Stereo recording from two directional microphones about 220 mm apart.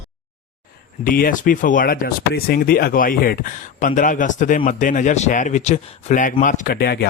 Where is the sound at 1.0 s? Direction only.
40° left (ahead or behind).